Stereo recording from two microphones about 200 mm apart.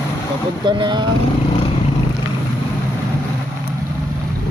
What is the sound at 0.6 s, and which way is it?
Speech, 25° right (ahead or behind).